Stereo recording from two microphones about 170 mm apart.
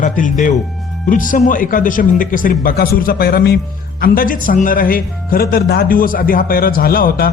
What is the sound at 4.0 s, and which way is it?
Speech, 55° left (ahead or behind).